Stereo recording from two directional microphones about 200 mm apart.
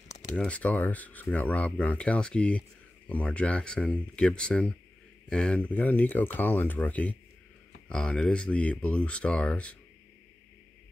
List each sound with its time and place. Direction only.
0.4 s speech: 5° left (ahead or behind)